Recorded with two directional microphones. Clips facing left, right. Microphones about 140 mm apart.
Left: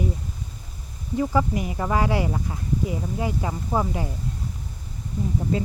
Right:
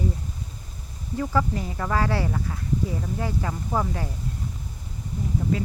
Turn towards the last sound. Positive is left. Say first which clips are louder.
# left 1 dB
turn(degrees=25)  # may be behind; listen again after turning